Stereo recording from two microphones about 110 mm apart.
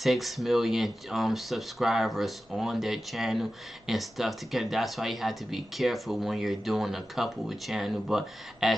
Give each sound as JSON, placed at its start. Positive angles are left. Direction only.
{"t": 0.0, "sound": "speech", "side_deg": 0}